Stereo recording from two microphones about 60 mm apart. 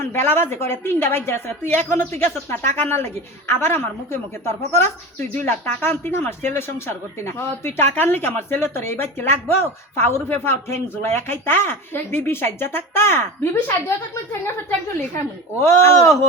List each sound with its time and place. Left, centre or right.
0.0 s a woman's voice: left
15.6 s speech: left